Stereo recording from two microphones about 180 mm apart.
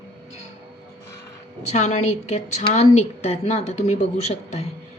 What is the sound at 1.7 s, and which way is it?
A woman's voice, 40° left (ahead or behind).